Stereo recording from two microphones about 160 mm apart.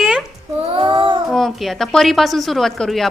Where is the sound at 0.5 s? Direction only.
35° right (ahead or behind).